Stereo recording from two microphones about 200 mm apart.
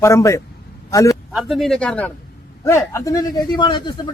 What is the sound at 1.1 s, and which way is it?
A man's voice, centre (ahead or behind).